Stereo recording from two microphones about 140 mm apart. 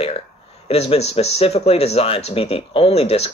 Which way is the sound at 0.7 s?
45° left (ahead or behind).